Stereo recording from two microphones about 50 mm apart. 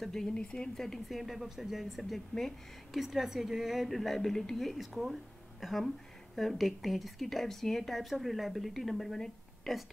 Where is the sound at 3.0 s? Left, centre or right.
Centre.